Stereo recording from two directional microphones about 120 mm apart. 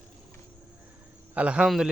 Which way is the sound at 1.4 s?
10° right (ahead or behind).